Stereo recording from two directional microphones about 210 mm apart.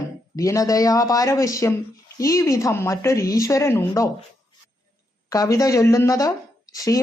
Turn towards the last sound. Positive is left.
turn(degrees=15)  # may be behind; listen again after turning